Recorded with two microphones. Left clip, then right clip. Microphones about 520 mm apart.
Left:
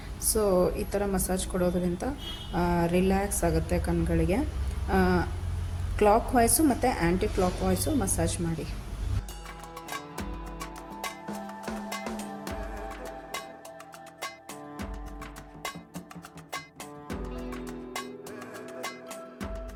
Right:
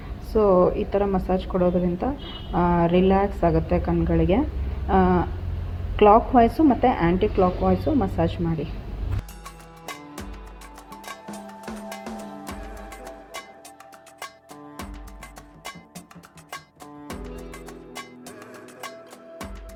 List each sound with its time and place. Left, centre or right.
0.3 s a woman's voice: left
11.6 s music: centre